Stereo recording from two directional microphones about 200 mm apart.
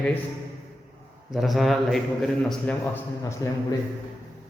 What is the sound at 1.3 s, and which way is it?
A man's voice, centre (ahead or behind).